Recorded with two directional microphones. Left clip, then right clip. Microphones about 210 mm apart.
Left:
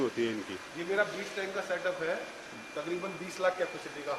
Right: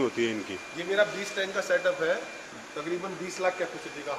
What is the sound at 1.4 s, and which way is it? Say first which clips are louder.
Speech: right 6 dB; 50° right (ahead or behind).